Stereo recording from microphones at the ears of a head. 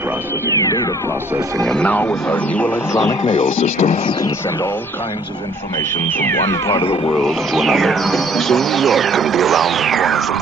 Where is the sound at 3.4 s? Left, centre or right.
Left.